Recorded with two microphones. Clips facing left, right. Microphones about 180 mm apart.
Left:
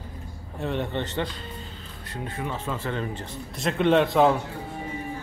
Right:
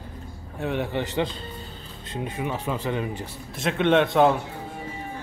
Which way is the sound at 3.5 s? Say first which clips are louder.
Even; centre (ahead or behind).